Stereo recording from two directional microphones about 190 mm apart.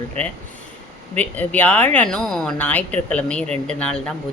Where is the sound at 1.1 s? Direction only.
10° left (ahead or behind).